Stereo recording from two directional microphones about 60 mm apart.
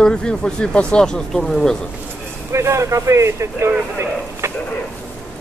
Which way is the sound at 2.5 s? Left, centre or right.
Right.